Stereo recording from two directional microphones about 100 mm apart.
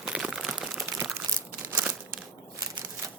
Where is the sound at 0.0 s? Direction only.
10° right (ahead or behind).